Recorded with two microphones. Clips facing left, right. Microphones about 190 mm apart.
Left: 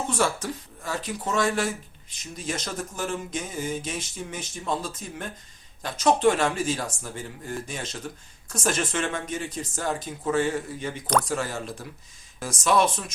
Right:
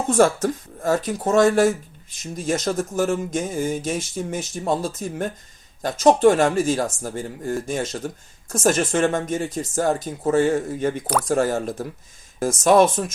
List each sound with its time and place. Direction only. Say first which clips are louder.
0.1 s speech: right 12 dB; 50° right (ahead or behind)
11.0 s speech: right 1 dB; 5° right (ahead or behind)
11.3 s speech: right 9 dB; 50° right (ahead or behind)